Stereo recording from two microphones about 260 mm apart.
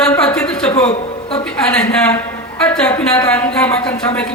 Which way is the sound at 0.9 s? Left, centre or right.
Left.